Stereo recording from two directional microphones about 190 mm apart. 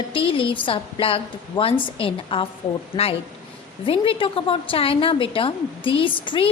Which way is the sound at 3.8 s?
30° left (ahead or behind).